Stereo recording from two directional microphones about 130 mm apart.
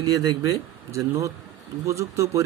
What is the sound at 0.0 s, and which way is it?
Speech, 30° right (ahead or behind).